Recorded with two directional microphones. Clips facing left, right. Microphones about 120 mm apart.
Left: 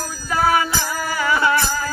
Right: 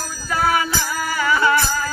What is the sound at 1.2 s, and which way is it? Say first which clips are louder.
Music: right 1 dB; 20° left (ahead or behind).